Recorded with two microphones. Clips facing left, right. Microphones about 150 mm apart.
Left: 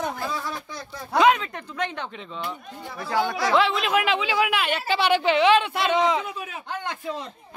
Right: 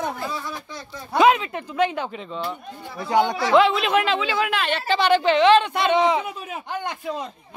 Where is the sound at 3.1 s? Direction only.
20° right (ahead or behind).